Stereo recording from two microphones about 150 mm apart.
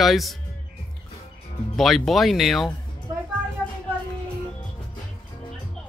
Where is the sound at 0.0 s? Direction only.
Centre (ahead or behind).